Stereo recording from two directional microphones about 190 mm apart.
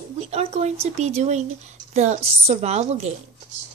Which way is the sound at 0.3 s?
35° right (ahead or behind).